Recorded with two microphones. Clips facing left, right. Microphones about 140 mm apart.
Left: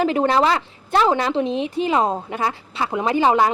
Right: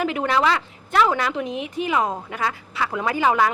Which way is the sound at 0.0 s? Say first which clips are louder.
Left 4 dB; 30° left (ahead or behind).